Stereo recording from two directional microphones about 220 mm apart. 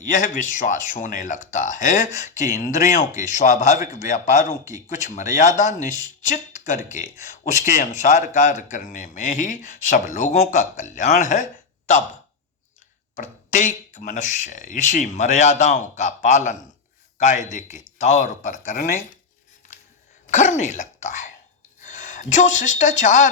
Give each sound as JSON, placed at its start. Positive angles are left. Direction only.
{"t": 0.0, "sound": "a man's voice", "side_deg": 35}
{"t": 13.1, "sound": "a man's voice", "side_deg": 35}
{"t": 20.2, "sound": "speech", "side_deg": 35}